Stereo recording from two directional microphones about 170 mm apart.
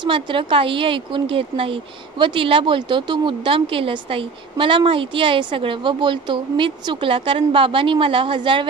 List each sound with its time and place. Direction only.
0.0 s a woman's voice: 30° right (ahead or behind)